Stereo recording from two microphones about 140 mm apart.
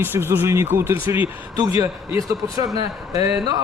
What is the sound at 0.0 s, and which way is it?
A man's voice, 15° right (ahead or behind).